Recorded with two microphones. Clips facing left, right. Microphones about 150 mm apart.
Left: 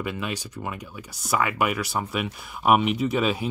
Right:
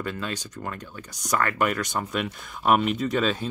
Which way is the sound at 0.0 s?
10° left (ahead or behind).